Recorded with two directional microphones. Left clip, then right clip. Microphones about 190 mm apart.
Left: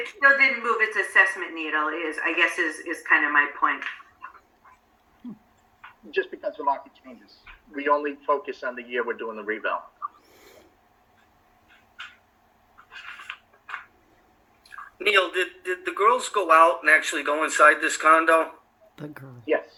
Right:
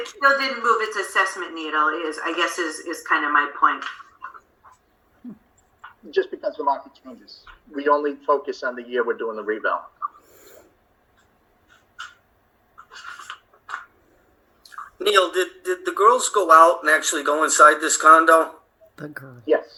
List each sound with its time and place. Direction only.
0.1 s a woman's voice: 25° right (ahead or behind)
6.1 s a woman's voice: 20° right (ahead or behind)
14.7 s speech: 15° right (ahead or behind)
19.0 s speech: 10° left (ahead or behind)